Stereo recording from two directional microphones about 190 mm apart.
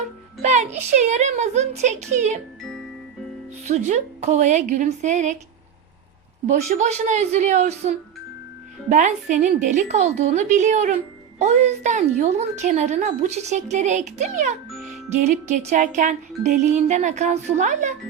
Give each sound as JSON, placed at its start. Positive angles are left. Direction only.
{"t": 0.4, "sound": "a woman's voice", "side_deg": -40}
{"t": 3.7, "sound": "a woman's voice", "side_deg": -35}
{"t": 6.5, "sound": "a woman's voice", "side_deg": -40}